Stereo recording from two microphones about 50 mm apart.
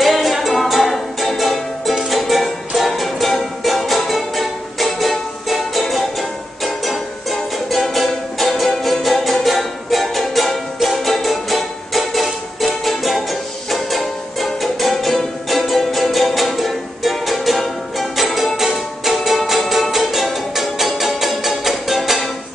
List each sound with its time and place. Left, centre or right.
0.0 s music: centre